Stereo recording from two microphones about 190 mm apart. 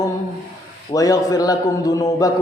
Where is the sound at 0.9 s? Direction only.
20° left (ahead or behind).